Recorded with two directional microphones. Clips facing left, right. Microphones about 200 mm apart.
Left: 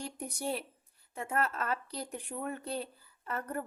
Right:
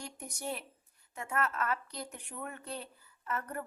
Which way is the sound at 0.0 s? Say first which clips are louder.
Left 4 dB; 35° left (ahead or behind).